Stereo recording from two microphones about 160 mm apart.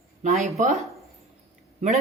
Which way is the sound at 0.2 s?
45° right (ahead or behind).